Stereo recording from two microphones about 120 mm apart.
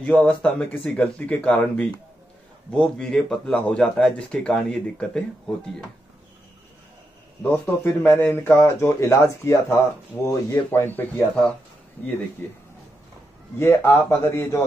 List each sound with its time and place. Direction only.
0.0 s speech: 10° left (ahead or behind)
7.4 s speech: 20° left (ahead or behind)